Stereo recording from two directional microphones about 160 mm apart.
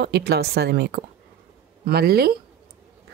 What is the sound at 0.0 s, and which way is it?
A woman's voice, 90° right.